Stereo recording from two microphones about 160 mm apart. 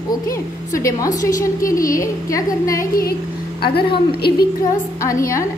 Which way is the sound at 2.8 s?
65° left (ahead or behind).